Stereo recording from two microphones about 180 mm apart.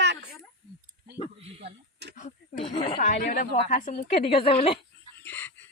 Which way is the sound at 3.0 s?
50° left (ahead or behind).